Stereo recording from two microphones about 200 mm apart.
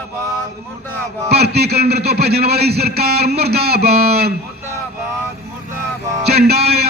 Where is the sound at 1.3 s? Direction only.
55° right (ahead or behind).